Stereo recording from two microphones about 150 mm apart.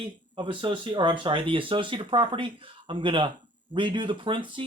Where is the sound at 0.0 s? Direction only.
35° right (ahead or behind).